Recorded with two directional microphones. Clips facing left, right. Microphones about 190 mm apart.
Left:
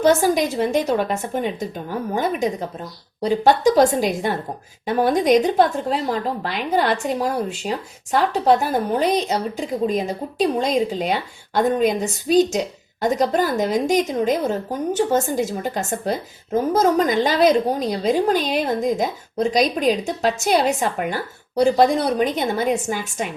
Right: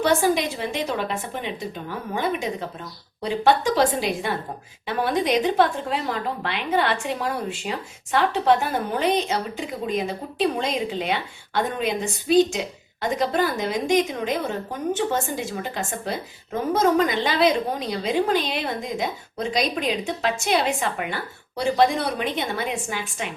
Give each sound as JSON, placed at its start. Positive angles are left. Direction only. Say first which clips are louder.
{"t": 0.0, "sound": "a woman's voice", "louder": "left 4 dB", "side_deg": 40}